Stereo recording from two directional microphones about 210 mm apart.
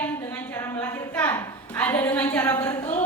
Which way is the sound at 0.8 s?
10° left (ahead or behind).